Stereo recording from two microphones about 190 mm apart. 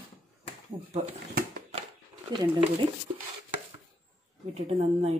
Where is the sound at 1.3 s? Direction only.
55° right (ahead or behind).